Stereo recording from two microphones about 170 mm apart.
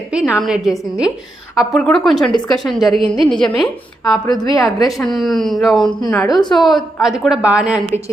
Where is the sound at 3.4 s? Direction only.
25° left (ahead or behind).